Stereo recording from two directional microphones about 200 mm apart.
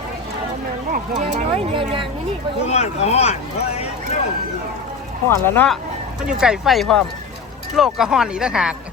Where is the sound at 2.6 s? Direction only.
35° left (ahead or behind).